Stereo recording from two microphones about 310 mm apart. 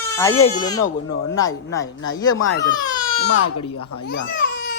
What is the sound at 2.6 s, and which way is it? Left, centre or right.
Speech, centre.